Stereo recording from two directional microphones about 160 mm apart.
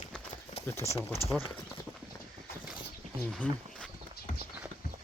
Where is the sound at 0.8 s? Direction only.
40° left (ahead or behind).